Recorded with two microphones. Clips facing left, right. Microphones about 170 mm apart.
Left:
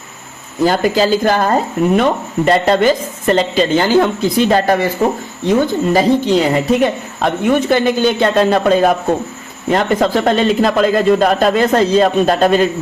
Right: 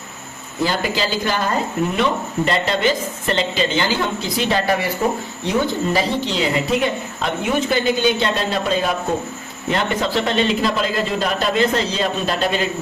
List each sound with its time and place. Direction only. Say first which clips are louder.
0.6 s speech: left 8 dB; 45° left (ahead or behind)